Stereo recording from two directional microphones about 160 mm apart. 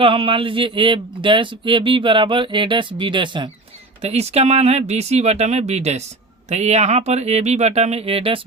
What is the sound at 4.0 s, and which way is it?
Speech, 40° right (ahead or behind).